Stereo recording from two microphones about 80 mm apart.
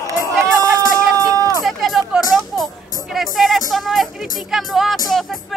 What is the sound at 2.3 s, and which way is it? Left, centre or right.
Music, centre.